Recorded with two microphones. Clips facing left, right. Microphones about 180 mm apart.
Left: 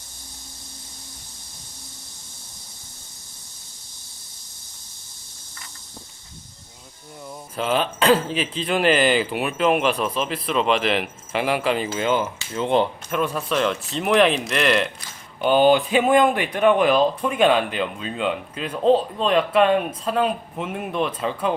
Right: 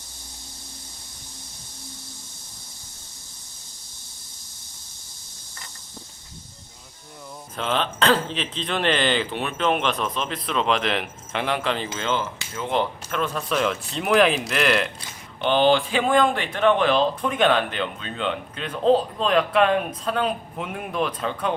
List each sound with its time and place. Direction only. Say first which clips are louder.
7.5 s speech: left 3 dB; 5° left (ahead or behind)
13.5 s speech: left 2 dB; centre (ahead or behind)
15.4 s speech: left 3 dB; 10° left (ahead or behind)